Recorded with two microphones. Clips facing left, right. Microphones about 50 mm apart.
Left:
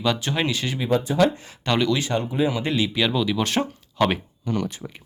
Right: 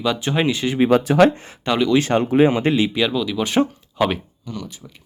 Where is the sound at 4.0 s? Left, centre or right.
Centre.